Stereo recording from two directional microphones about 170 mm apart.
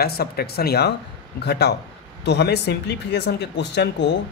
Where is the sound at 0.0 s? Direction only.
65° left (ahead or behind).